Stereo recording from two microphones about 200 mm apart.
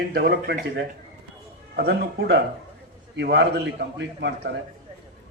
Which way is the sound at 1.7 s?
50° right (ahead or behind).